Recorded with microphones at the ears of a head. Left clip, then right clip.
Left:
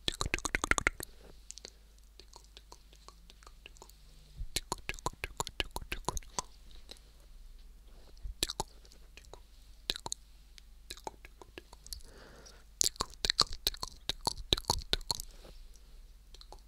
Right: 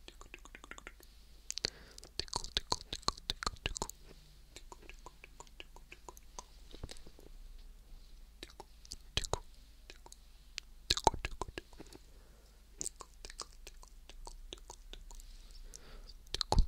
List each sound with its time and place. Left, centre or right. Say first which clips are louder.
0.0 s a sound: left 19 dB; left
1.5 s whispering: right 12 dB; right
4.6 s chewing: left 16 dB; left
8.8 s whispering: right 17 dB; right
10.5 s a sound: right 14 dB; right
11.9 s chewing: left 9 dB; left
15.7 s clicking: right 9 dB; right